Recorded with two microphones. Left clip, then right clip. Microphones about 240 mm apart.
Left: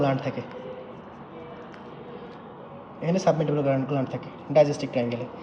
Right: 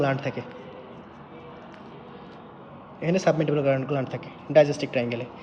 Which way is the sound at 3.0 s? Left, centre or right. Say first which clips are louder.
Right 1 dB; centre.